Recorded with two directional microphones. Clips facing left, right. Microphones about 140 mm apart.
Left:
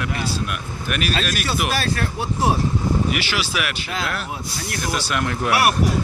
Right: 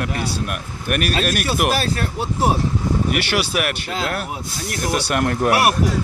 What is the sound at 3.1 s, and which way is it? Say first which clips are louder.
Speech: right 4 dB; 55° right (ahead or behind).